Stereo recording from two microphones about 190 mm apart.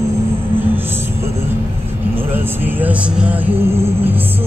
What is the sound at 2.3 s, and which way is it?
Music, 10° right (ahead or behind).